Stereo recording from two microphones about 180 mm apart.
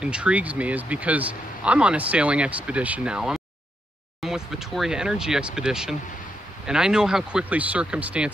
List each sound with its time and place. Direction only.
0.0 s speech: 5° right (ahead or behind)